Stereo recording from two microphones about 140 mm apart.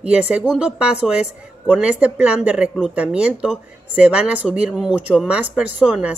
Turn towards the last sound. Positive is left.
turn(degrees=-10)  # may be behind; listen again after turning